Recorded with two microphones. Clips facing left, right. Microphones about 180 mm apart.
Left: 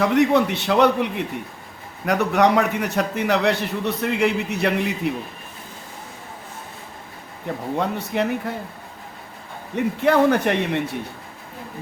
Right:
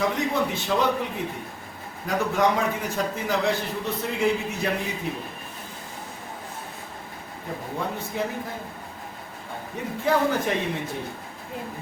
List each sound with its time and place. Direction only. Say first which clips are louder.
0.0 s a man's voice: left 7 dB; 70° left (ahead or behind)
7.8 s a man's voice: left 5 dB; 70° left (ahead or behind)
9.7 s a man's voice: left 6 dB; 70° left (ahead or behind)